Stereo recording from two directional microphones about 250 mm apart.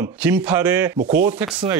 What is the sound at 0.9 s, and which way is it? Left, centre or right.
Speech, right.